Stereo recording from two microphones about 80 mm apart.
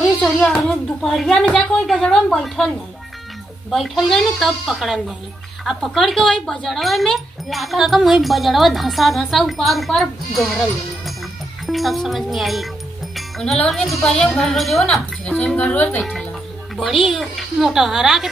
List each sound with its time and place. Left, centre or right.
0.6 s speech: centre
3.7 s speech: centre
11.6 s speech: centre
13.1 s music: centre
13.7 s speech: centre
15.5 s a woman's voice: centre
16.0 s speech: centre